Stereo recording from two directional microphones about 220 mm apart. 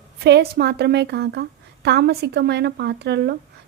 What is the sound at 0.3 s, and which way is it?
A woman's voice, 50° right (ahead or behind).